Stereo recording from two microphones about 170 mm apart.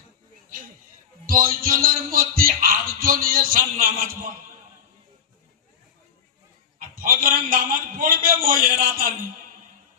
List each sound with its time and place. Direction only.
1.3 s music: 55° right (ahead or behind)
6.7 s a man's voice: 55° right (ahead or behind)